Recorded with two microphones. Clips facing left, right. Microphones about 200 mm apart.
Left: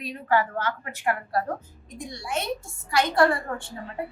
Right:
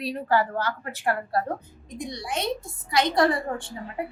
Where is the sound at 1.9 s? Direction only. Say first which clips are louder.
Right 1 dB; 20° right (ahead or behind).